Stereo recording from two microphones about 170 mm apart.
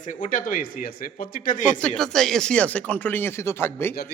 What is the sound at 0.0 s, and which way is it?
A man's voice, 50° left (ahead or behind).